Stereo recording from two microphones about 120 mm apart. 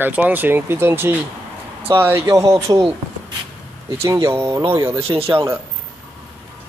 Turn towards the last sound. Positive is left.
turn(degrees=-50)  # may be behind; listen again after turning